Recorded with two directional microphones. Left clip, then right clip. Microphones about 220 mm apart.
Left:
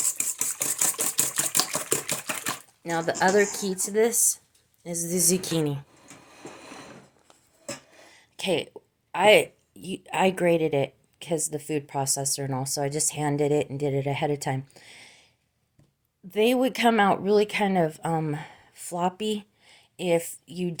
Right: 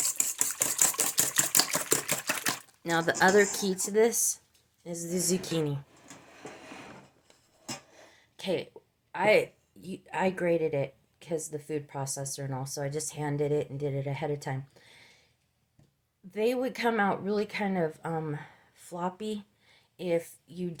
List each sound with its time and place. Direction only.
0.1 s camera: centre (ahead or behind)
1.5 s typewriter: 10° right (ahead or behind)
4.8 s a woman's voice: 25° left (ahead or behind)
8.1 s a sound: 30° left (ahead or behind)
9.1 s speech: 35° left (ahead or behind)
16.3 s speech: 35° left (ahead or behind)